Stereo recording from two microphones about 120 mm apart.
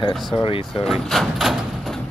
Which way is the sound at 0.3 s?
45° left (ahead or behind).